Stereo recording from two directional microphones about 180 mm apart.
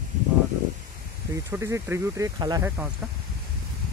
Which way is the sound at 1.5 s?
15° right (ahead or behind).